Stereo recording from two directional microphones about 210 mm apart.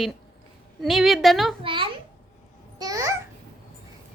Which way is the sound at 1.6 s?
25° right (ahead or behind).